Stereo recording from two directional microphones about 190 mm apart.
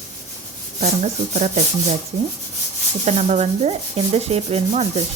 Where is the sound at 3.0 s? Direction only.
35° right (ahead or behind).